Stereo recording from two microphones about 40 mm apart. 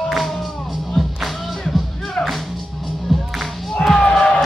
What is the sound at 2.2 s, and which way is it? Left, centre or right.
Music, left.